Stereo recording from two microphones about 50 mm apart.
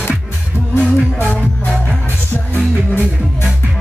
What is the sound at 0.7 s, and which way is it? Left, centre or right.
Music, left.